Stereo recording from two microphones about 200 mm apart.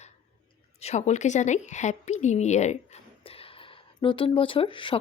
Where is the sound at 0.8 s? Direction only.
35° left (ahead or behind).